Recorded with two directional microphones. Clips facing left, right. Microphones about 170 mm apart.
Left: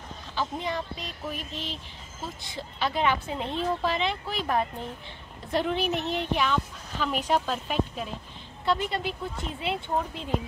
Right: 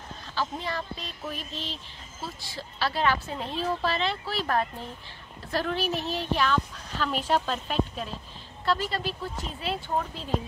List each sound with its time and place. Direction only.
0.3 s a woman's voice: 15° left (ahead or behind)
8.6 s speech: 20° left (ahead or behind)